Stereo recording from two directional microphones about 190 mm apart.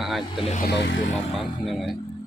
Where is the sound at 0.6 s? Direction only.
65° left (ahead or behind).